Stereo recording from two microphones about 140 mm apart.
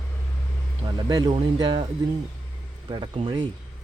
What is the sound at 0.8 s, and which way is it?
A man's voice, 30° right (ahead or behind).